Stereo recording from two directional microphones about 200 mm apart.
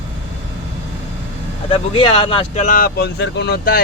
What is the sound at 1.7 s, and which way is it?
Speech, 25° left (ahead or behind).